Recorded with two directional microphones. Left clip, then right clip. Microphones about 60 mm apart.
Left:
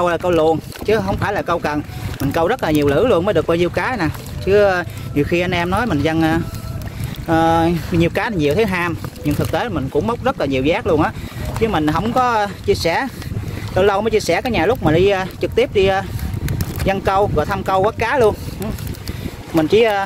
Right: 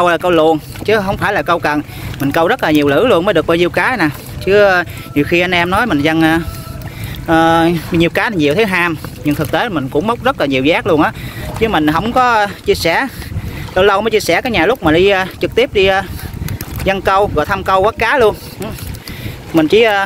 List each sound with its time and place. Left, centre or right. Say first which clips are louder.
0.0 s speech: right 5 dB; centre
7.2 s speech: right 4 dB; left
9.7 s speech: right 4 dB; centre
11.6 s speech: right 5 dB; left
12.0 s speech: right 5 dB; left
14.9 s speech: right 5 dB; left
15.4 s speech: right 3 dB; left
19.5 s speech: right 4 dB; left